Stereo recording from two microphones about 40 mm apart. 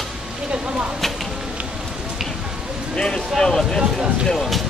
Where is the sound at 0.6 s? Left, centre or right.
Right.